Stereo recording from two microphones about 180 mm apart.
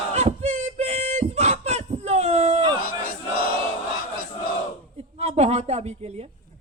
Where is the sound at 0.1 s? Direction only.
40° right (ahead or behind).